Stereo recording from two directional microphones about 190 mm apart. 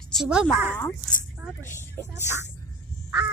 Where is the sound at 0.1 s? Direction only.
5° right (ahead or behind).